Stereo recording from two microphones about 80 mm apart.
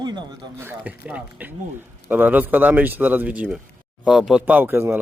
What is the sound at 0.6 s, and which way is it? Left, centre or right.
Speech, right.